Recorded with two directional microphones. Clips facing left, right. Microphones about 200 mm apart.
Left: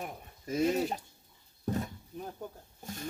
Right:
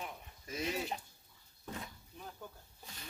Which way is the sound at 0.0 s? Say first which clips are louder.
Left 5 dB; 50° left (ahead or behind).